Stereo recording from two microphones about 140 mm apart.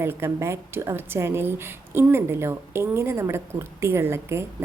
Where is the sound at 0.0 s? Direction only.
20° right (ahead or behind).